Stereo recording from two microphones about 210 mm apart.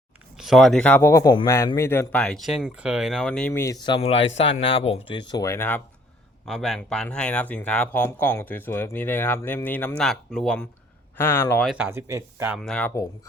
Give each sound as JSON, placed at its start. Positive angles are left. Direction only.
{"t": 0.3, "sound": "speech", "side_deg": 0}
{"t": 11.9, "sound": "speech", "side_deg": -15}